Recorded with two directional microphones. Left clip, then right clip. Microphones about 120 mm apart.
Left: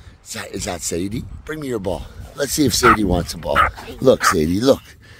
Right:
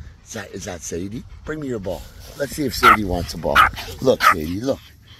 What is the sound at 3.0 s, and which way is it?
Speech, 55° left (ahead or behind).